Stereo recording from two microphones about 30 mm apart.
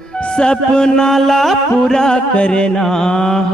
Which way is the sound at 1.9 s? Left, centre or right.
Left.